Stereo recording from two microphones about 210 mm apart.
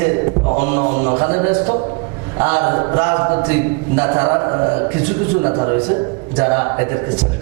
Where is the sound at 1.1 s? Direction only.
30° right (ahead or behind).